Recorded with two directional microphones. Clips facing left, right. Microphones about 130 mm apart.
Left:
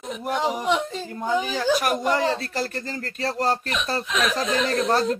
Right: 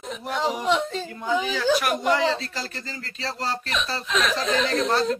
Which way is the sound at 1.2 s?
45° left (ahead or behind).